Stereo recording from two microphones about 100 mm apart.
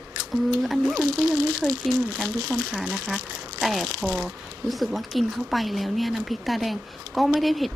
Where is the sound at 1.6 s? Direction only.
15° left (ahead or behind).